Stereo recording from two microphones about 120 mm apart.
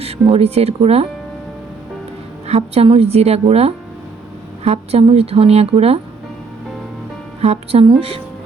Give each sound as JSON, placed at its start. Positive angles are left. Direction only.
{"t": 0.0, "sound": "speech", "side_deg": -55}
{"t": 2.5, "sound": "speech", "side_deg": -55}
{"t": 7.4, "sound": "speech", "side_deg": -55}